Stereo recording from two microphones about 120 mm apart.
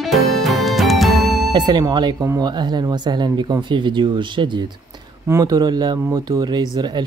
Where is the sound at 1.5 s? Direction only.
35° right (ahead or behind).